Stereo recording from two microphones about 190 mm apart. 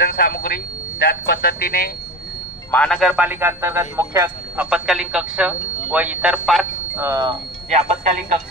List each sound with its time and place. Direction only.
0.0 s speech: 55° left (ahead or behind)
2.7 s a man's voice: 5° left (ahead or behind); by 4.6 s 15° right (ahead or behind)
4.6 s speech: 5° right (ahead or behind)
7.0 s a man's voice: 20° right (ahead or behind)
7.7 s speech: 40° right (ahead or behind)